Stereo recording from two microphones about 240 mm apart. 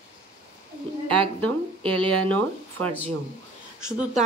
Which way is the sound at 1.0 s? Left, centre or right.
Centre.